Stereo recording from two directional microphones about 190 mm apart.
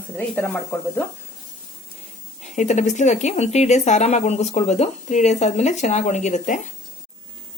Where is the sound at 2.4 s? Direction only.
40° left (ahead or behind).